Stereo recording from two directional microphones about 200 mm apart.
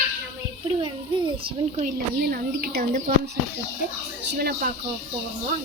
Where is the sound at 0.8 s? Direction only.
25° right (ahead or behind).